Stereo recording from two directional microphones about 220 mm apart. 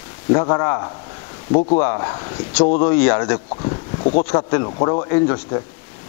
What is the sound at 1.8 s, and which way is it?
Speech, 20° left (ahead or behind).